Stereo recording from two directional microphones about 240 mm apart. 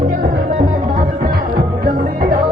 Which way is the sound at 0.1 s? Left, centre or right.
Right.